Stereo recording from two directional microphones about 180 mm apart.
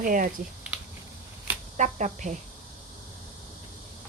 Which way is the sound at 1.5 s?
10° right (ahead or behind).